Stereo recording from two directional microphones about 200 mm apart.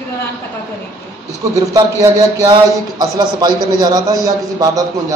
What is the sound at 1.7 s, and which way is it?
A man's voice, 15° right (ahead or behind).